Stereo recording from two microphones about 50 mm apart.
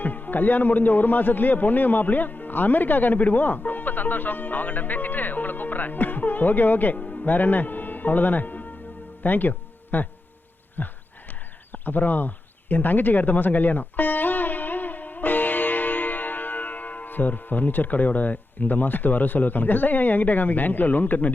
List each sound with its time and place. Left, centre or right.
0.0 s speech: left
6.9 s speech: left
7.3 s speech: left